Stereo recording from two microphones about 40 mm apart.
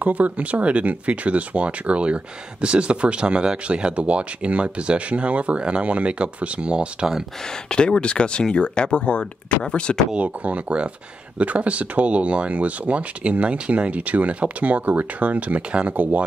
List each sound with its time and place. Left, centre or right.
0.0 s speech: right
7.7 s speech: left
10.1 s speech: right
16.0 s speech: right